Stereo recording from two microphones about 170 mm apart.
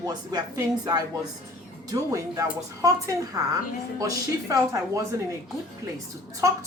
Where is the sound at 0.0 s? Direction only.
25° right (ahead or behind).